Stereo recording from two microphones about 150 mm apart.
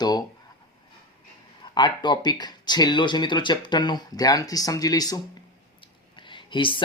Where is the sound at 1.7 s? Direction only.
30° left (ahead or behind).